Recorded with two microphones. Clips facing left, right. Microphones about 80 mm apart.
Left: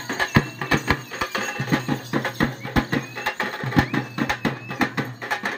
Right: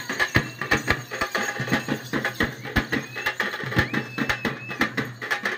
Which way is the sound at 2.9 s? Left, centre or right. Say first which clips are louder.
Left 2 dB; centre.